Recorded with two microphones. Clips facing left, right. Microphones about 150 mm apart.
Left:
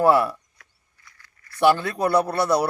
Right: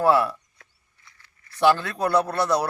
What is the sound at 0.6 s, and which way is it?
Chop, 25° right (ahead or behind).